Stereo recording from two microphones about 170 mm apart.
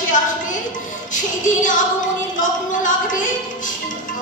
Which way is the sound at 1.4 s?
50° left (ahead or behind).